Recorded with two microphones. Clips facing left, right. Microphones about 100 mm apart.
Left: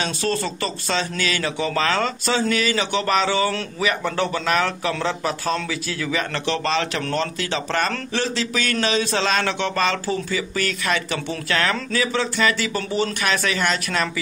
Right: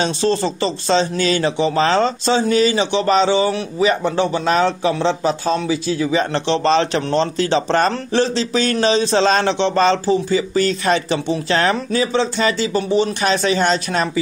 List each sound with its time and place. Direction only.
0.0 s a man's voice: 25° right (ahead or behind)